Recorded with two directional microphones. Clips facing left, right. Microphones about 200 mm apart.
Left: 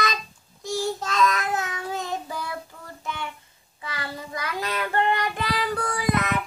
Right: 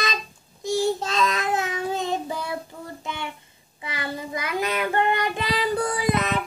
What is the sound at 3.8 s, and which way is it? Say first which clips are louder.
Child singing: right 3 dB; 20° right (ahead or behind).